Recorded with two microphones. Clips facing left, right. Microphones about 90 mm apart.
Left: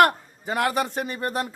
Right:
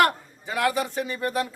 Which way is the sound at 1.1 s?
40° left (ahead or behind).